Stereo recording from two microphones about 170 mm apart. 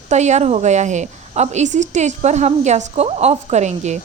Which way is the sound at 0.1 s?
40° right (ahead or behind).